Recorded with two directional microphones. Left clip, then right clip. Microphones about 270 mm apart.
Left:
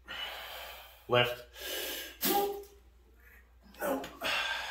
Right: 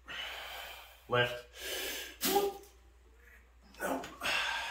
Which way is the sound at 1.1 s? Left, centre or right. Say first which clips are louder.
Left 3 dB; left.